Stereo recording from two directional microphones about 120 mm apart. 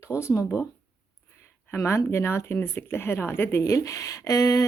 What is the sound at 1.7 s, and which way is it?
Speech, 20° left (ahead or behind).